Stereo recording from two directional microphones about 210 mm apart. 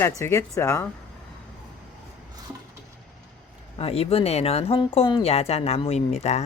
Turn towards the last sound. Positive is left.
turn(degrees=30)  # may be behind; listen again after turning